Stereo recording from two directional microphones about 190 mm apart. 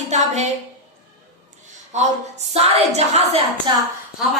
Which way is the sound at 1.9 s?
35° right (ahead or behind).